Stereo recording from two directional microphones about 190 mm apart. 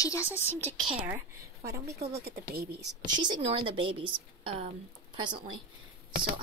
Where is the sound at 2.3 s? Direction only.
55° right (ahead or behind).